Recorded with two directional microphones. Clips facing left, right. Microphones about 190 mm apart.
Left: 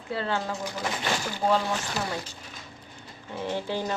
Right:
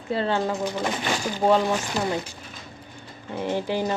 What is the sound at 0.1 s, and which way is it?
Speech, 25° right (ahead or behind).